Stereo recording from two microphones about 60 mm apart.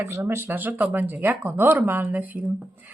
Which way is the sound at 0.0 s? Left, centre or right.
Right.